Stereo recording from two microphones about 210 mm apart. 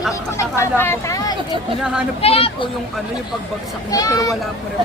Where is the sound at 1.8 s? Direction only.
5° right (ahead or behind).